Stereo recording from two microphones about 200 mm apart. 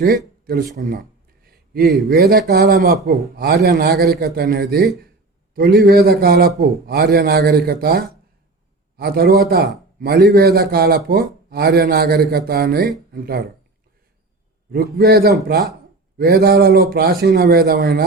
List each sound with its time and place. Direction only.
0.0 s a sound: 50° right (ahead or behind)
2.0 s a man's voice: 50° right (ahead or behind)
14.7 s a man's voice: 50° right (ahead or behind)